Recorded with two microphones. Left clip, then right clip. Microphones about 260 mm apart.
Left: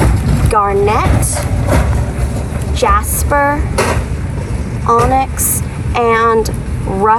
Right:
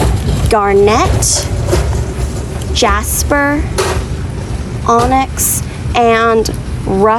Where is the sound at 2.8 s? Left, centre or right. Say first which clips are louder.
Even; centre.